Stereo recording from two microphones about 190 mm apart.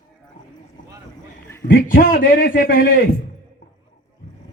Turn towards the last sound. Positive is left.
turn(degrees=45)  # may be behind; listen again after turning